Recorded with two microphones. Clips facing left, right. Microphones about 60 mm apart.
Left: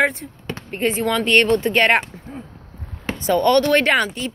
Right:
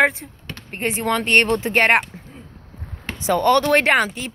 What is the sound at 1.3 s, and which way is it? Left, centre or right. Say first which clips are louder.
Speech: left 1 dB; centre.